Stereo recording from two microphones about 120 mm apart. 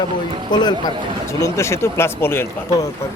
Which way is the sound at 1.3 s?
25° left (ahead or behind).